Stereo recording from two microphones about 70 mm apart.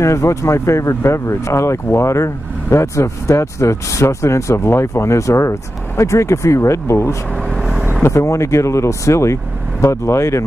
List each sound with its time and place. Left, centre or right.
0.0 s speech: left
7.4 s vehicle: centre
8.0 s speech: left